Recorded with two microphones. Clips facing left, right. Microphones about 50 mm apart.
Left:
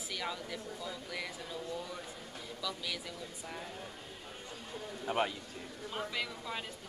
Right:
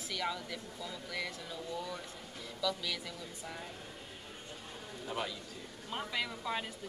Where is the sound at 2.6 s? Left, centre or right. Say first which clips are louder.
Right 4 dB; centre.